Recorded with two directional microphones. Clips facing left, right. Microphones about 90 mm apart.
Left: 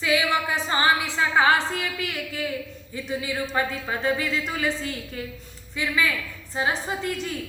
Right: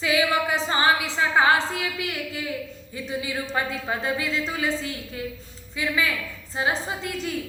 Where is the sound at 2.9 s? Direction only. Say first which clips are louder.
Left 1 dB; 30° right (ahead or behind).